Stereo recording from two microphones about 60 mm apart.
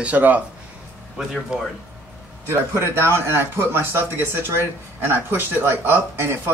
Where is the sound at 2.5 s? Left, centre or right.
Right.